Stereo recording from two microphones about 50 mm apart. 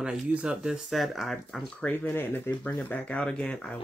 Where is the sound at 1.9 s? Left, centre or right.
Left.